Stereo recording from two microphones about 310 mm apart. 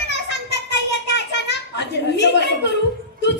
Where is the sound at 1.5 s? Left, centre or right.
Left.